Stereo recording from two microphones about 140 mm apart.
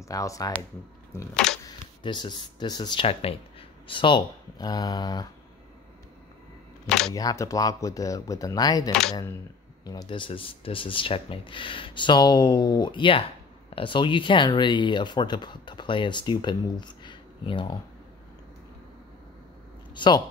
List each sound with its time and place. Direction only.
0.0 s speech: 25° left (ahead or behind)
1.3 s speech: 5° left (ahead or behind)
2.0 s speech: 35° left (ahead or behind)
7.2 s speech: 25° left (ahead or behind)
19.9 s a sound: 35° left (ahead or behind)